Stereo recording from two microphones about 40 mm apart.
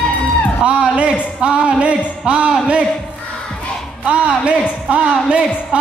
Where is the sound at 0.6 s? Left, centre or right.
Right.